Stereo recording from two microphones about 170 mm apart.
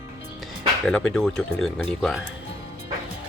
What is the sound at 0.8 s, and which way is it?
Speech, centre (ahead or behind).